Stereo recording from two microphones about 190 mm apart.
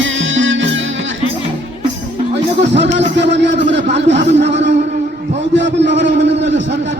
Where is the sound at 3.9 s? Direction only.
35° right (ahead or behind).